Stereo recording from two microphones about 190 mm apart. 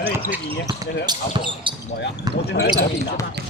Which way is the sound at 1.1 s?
25° right (ahead or behind).